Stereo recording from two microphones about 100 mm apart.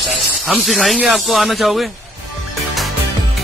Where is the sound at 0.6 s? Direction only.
Centre (ahead or behind).